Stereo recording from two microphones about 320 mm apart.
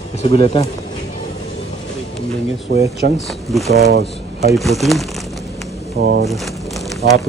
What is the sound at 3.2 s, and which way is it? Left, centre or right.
Speech, centre.